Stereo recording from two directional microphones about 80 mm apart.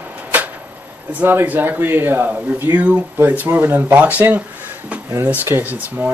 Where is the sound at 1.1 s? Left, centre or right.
Right.